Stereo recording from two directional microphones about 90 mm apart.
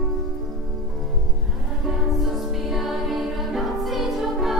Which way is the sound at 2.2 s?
Centre (ahead or behind).